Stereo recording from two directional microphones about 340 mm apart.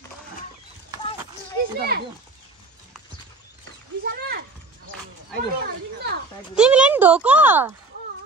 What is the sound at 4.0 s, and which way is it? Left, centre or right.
Speech, right.